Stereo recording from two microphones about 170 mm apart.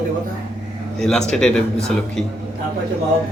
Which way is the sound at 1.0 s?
5° left (ahead or behind).